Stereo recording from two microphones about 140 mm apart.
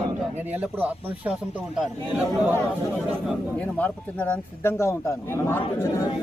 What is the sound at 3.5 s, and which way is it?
Speech, 10° left (ahead or behind).